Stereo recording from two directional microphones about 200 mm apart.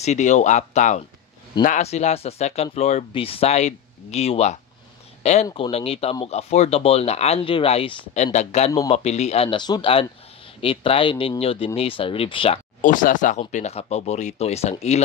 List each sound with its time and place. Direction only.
0.0 s speech: 35° left (ahead or behind)
12.8 s speech: 40° left (ahead or behind)